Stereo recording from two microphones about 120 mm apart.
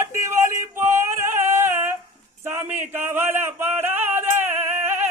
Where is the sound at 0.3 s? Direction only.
20° right (ahead or behind).